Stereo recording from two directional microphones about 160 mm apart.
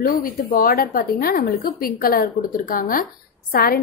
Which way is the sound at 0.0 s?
60° left (ahead or behind).